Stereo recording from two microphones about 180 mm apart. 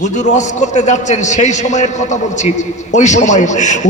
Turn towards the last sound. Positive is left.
turn(degrees=40)  # may be behind; listen again after turning